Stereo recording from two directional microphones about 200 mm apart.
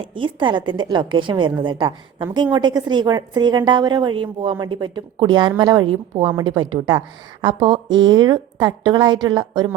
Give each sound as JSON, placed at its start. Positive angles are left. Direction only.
{"t": 0.0, "sound": "a woman's voice", "side_deg": -25}